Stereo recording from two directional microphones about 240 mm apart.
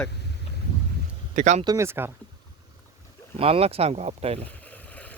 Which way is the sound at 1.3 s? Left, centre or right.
Right.